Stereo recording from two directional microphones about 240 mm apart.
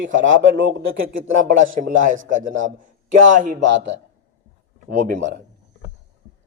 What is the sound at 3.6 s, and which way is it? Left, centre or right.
Speech, right.